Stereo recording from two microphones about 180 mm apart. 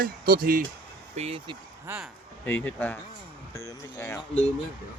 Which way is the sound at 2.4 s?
10° left (ahead or behind).